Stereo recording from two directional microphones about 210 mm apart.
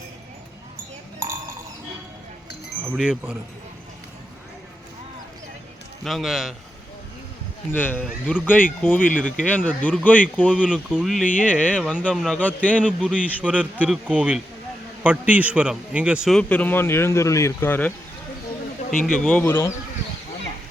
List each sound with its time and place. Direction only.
2.8 s a man's voice: 5° right (ahead or behind)
6.1 s a man's voice: centre (ahead or behind)
7.7 s speech: 10° left (ahead or behind)
8.0 s a man's voice: 5° right (ahead or behind)
8.8 s speech: 10° left (ahead or behind)
10.6 s a man's voice: 5° right (ahead or behind)
13.1 s a man's voice: 5° right (ahead or behind)
18.9 s speech: 40° left (ahead or behind)
19.1 s speech: 5° left (ahead or behind)